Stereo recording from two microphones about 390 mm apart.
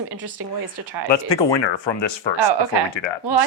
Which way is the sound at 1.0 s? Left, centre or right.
Left.